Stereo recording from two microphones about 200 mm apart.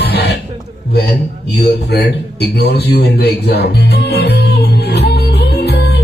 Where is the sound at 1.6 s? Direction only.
55° left (ahead or behind).